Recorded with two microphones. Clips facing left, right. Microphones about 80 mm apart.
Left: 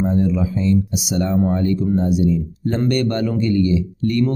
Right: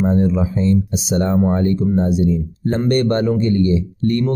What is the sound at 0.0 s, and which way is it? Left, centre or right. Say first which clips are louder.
Speech: right 2 dB; right.